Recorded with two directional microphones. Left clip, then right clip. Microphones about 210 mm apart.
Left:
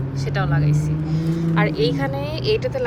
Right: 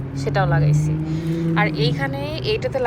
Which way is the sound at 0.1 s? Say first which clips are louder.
Right 5 dB; centre (ahead or behind).